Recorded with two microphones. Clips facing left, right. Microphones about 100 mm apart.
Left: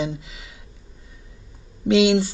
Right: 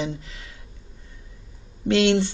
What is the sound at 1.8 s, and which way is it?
Speech, 10° left (ahead or behind).